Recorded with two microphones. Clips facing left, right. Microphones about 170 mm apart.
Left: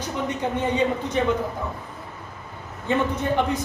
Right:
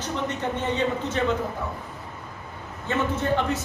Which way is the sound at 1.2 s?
15° left (ahead or behind).